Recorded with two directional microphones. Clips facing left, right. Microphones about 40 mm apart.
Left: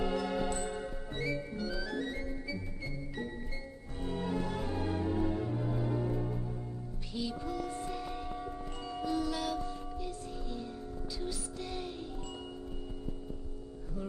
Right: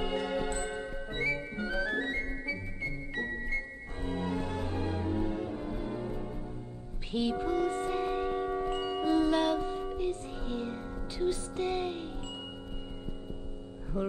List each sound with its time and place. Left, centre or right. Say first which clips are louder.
0.1 s music: right 1 dB; right
3.2 s music: right 9 dB; right
7.1 s a sound: right 7 dB; right
13.9 s music: right 9 dB; right